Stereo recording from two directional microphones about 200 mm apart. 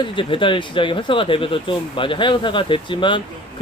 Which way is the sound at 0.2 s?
25° left (ahead or behind).